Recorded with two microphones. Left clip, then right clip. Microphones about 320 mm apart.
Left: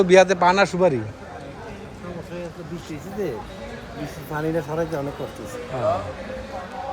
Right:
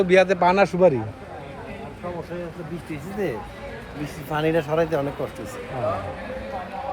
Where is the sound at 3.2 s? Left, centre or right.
Right.